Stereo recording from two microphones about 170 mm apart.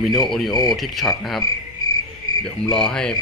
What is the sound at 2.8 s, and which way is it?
Speech, 5° left (ahead or behind).